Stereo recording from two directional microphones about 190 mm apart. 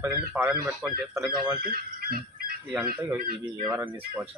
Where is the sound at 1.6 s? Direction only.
55° right (ahead or behind).